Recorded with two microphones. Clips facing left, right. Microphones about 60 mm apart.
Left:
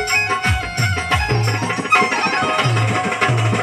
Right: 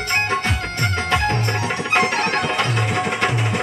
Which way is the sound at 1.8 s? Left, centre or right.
Centre.